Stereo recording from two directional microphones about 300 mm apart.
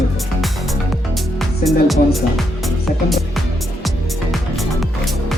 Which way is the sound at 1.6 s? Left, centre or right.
Centre.